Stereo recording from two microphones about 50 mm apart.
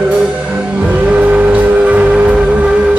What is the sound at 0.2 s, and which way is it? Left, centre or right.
Music, right.